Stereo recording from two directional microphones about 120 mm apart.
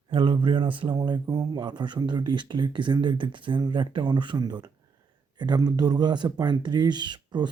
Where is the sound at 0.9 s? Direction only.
35° right (ahead or behind).